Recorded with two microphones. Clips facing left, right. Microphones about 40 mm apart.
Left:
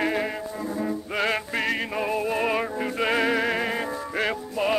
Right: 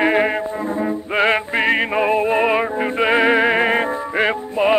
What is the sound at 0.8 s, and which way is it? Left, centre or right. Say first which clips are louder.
Music: right 8 dB; right.